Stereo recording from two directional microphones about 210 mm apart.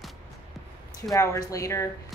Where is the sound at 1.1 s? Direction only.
15° left (ahead or behind).